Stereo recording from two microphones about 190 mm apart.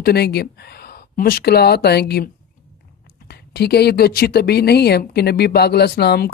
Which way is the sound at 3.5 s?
60° left (ahead or behind).